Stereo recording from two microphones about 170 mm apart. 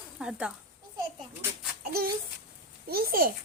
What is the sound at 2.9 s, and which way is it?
Speech, 65° right (ahead or behind).